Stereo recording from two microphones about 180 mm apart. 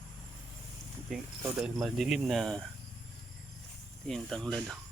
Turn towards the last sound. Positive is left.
turn(degrees=0)  # may be behind; listen again after turning